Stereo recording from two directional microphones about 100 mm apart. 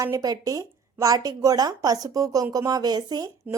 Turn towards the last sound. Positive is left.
turn(degrees=-40)  # may be behind; listen again after turning